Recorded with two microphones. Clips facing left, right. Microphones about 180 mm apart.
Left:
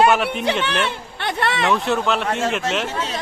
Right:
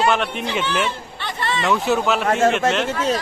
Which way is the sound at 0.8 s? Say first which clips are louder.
Left 1 dB; 65° left (ahead or behind).